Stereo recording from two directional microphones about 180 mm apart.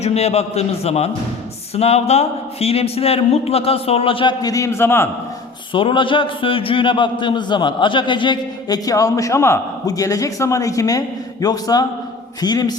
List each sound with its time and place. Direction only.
0.0 s a man's voice: 35° left (ahead or behind); by 5.0 s 15° left (ahead or behind)
5.7 s a man's voice: 30° left (ahead or behind)